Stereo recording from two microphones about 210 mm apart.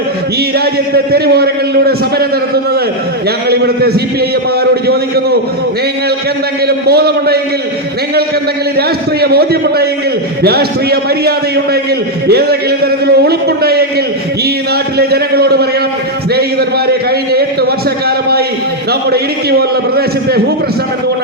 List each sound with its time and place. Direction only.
0.6 s a man's voice: 50° right (ahead or behind)
3.5 s a man's voice: 50° right (ahead or behind)
6.7 s a man's voice: 50° right (ahead or behind)
9.2 s a man's voice: 50° right (ahead or behind)
14.9 s a man's voice: 50° right (ahead or behind)
18.9 s a man's voice: 50° right (ahead or behind)